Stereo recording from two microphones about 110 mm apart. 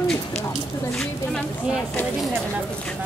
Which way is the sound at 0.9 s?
5° left (ahead or behind).